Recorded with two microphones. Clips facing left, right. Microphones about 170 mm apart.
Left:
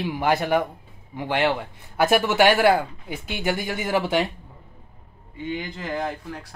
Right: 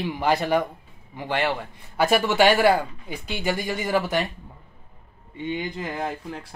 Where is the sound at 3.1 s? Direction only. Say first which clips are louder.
Even; 60° left (ahead or behind).